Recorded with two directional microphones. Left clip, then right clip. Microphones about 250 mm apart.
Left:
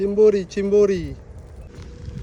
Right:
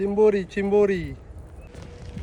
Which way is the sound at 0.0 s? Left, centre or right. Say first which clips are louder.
Left 4 dB; centre.